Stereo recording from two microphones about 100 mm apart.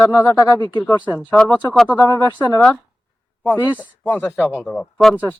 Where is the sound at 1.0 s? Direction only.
15° right (ahead or behind).